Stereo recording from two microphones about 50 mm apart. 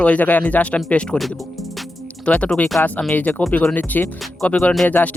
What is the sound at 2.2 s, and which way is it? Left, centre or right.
Speech, left.